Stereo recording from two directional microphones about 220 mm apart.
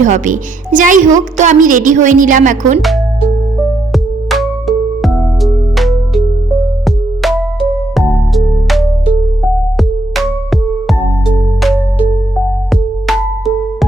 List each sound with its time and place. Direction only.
0.0 s a woman's voice: 35° right (ahead or behind)
3.9 s music: centre (ahead or behind)
12.7 s music: centre (ahead or behind)